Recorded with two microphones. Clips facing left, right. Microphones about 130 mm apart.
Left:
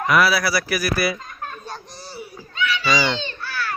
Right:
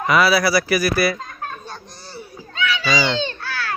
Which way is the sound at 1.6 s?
5° left (ahead or behind).